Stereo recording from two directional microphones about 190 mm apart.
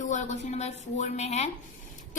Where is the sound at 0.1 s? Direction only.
40° left (ahead or behind).